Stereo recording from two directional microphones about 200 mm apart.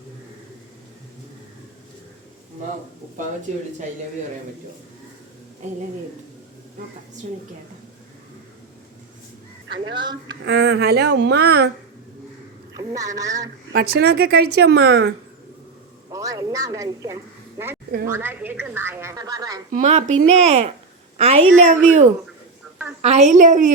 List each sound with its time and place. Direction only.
3.5 s speech: 35° right (ahead or behind)
9.9 s speech: 20° right (ahead or behind)
10.4 s speech: 55° right (ahead or behind)
12.8 s a woman's voice: 15° right (ahead or behind)
13.7 s speech: 50° right (ahead or behind)
16.0 s a woman's voice: 15° right (ahead or behind)
19.7 s a woman's voice: 35° right (ahead or behind)